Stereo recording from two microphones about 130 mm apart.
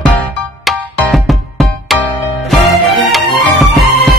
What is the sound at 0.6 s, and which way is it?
Music, centre (ahead or behind).